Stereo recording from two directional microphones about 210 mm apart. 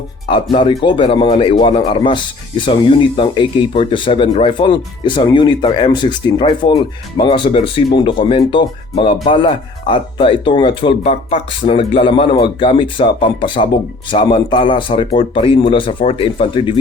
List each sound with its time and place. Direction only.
0.5 s speech: 20° left (ahead or behind)